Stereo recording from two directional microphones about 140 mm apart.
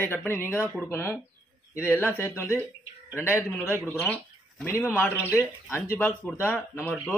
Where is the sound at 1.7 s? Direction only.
15° left (ahead or behind).